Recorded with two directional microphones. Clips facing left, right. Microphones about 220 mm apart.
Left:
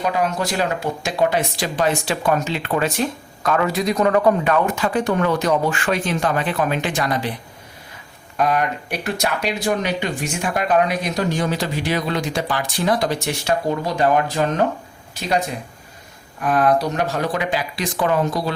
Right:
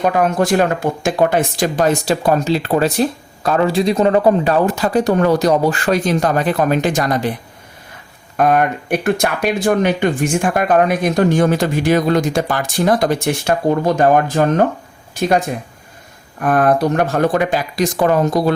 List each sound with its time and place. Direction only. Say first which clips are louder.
0.0 s speech: right 6 dB; 50° right (ahead or behind)
8.4 s speech: right 5 dB; 50° right (ahead or behind)
16.4 s speech: right 4 dB; 50° right (ahead or behind)